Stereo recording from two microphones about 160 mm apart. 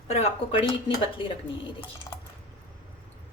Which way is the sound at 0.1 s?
40° left (ahead or behind).